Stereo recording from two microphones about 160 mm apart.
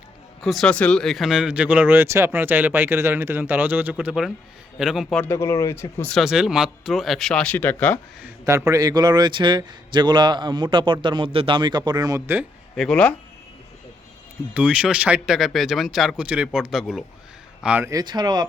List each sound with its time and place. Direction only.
0.4 s speech: centre (ahead or behind)
5.0 s speech: 15° left (ahead or behind)
6.1 s speech: 5° right (ahead or behind)
8.4 s speech: 20° right (ahead or behind)
12.7 s speech: 5° left (ahead or behind)
14.5 s speech: 5° right (ahead or behind)
17.9 s speech: 25° right (ahead or behind)